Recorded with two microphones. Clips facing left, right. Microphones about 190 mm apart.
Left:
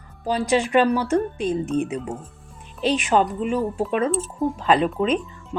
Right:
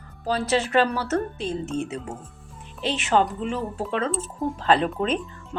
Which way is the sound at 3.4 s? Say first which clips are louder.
Left 5 dB; 15° left (ahead or behind).